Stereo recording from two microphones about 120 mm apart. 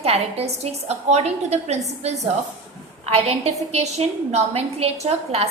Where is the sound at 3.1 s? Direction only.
60° right (ahead or behind).